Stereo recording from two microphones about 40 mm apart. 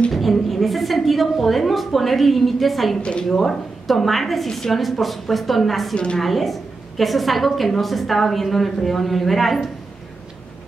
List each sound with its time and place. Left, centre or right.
0.1 s a sound: centre
3.0 s a woman's voice: left
3.3 s a woman's voice: centre